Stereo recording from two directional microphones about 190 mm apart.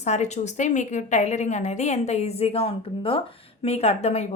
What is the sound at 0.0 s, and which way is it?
A woman's voice, 35° left (ahead or behind).